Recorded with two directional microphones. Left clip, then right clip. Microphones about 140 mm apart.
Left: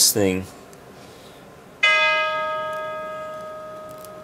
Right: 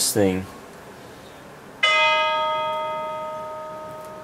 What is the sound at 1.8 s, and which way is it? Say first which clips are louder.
Church bell: even; 5° right (ahead or behind).